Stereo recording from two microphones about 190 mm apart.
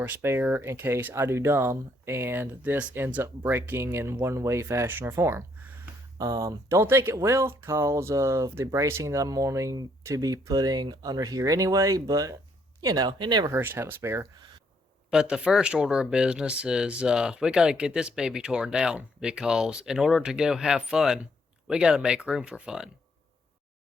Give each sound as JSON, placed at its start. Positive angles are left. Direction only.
{"t": 0.0, "sound": "speech", "side_deg": -10}